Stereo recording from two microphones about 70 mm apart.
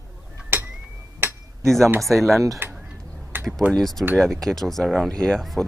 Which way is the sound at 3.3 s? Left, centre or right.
Right.